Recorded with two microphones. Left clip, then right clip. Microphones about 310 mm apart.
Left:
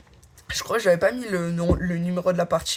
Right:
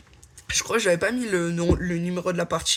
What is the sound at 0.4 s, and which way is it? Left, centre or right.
Speech, right.